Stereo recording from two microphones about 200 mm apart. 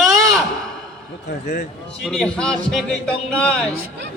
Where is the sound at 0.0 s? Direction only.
Centre (ahead or behind).